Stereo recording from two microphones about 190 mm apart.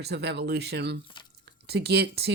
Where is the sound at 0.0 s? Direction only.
60° right (ahead or behind).